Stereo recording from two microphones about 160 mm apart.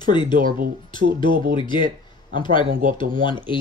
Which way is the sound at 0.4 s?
60° right (ahead or behind).